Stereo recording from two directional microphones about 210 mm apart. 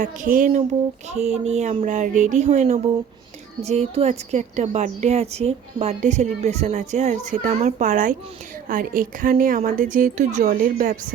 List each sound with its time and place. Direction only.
0.0 s a woman's voice: 40° right (ahead or behind)